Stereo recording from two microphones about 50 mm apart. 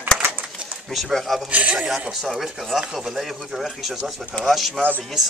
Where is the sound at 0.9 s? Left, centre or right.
Centre.